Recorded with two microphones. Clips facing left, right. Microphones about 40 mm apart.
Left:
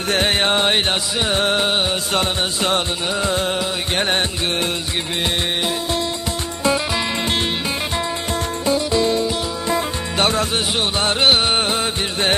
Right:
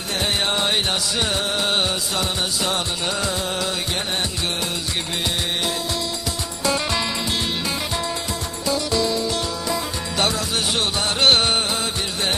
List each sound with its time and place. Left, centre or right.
0.1 s music: left
0.5 s music: left
8.6 s music: left
11.1 s music: centre
11.5 s music: left